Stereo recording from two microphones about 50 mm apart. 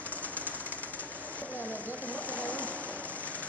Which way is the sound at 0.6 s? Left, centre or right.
Left.